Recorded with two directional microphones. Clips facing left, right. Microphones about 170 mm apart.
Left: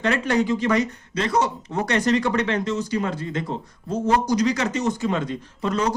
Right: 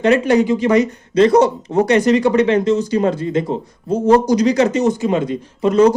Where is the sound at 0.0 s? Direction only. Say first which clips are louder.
Right 8 dB; 15° right (ahead or behind).